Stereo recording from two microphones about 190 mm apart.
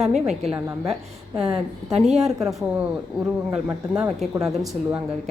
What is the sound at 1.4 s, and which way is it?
Speech, 30° right (ahead or behind).